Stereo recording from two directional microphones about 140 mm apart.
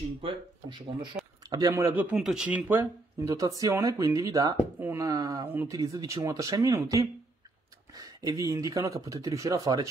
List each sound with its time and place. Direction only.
0.2 s speech: 35° right (ahead or behind)
1.5 s speech: 25° right (ahead or behind)
1.9 s speech: 10° right (ahead or behind)
3.2 s speech: 25° right (ahead or behind)